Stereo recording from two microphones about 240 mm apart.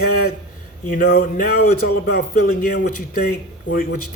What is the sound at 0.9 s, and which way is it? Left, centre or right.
Speech, left.